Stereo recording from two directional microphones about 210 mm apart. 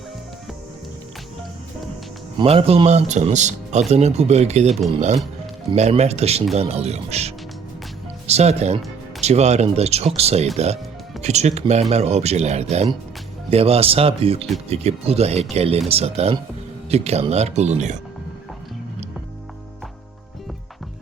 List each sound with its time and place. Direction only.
2.4 s speech: 25° right (ahead or behind)